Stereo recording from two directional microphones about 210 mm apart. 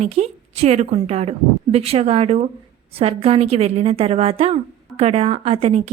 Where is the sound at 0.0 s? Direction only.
30° right (ahead or behind).